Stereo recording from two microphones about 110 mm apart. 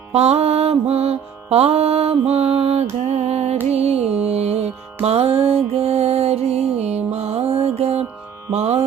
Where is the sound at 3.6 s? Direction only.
70° right (ahead or behind).